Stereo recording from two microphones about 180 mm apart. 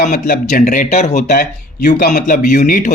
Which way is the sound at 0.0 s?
50° left (ahead or behind).